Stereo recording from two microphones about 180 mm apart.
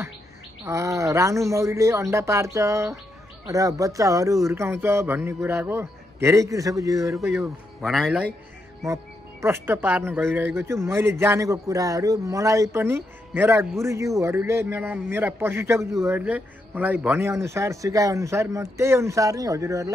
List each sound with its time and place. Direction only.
0.7 s speech: 15° right (ahead or behind)
7.8 s a man's voice: centre (ahead or behind)
8.8 s speech: 15° right (ahead or behind)